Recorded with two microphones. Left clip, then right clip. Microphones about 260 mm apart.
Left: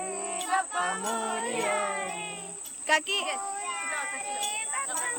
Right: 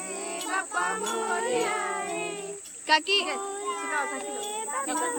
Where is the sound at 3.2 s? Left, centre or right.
Centre.